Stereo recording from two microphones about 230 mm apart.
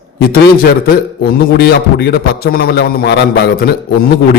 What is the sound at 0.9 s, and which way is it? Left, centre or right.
A man's voice, left.